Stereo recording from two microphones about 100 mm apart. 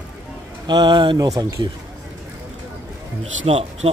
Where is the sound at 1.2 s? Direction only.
35° right (ahead or behind).